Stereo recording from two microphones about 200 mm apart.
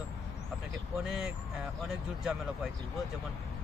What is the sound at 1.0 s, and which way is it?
Speech, 5° right (ahead or behind).